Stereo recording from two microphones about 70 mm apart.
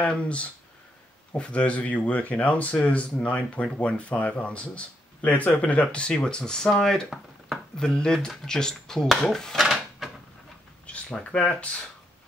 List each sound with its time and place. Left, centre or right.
0.0 s speech: centre
9.6 s drawer open or close: centre
10.9 s speech: centre